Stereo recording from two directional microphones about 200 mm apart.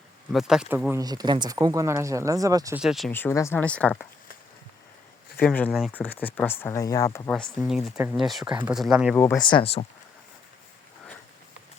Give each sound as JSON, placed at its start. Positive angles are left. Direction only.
{"t": 0.3, "sound": "speech", "side_deg": -5}
{"t": 2.7, "sound": "speech", "side_deg": 0}
{"t": 3.1, "sound": "speech", "side_deg": 10}
{"t": 5.4, "sound": "speech", "side_deg": 10}
{"t": 7.3, "sound": "speech", "side_deg": 5}
{"t": 9.4, "sound": "speech", "side_deg": 25}